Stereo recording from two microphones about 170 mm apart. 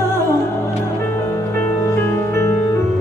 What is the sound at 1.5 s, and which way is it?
Music, 15° left (ahead or behind).